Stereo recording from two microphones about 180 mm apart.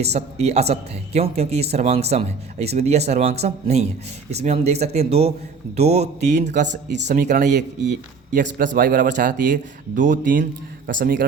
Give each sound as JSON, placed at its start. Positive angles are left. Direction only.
{"t": 0.0, "sound": "speech", "side_deg": -35}